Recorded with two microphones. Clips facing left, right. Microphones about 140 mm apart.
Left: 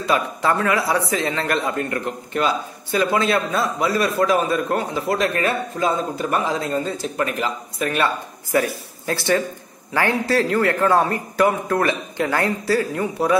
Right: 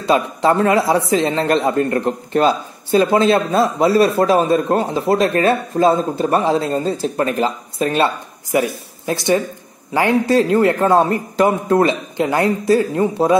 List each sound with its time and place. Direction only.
0.0 s speech: 25° right (ahead or behind)